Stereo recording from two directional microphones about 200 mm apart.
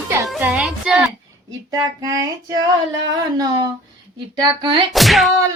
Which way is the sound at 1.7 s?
20° right (ahead or behind).